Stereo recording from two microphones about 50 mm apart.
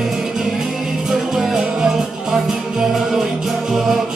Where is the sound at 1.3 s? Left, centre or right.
Centre.